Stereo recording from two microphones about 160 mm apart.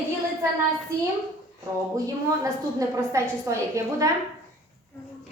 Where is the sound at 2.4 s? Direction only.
20° right (ahead or behind).